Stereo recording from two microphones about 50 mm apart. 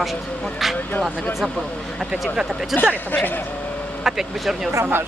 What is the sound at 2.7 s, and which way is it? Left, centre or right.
Speech, left.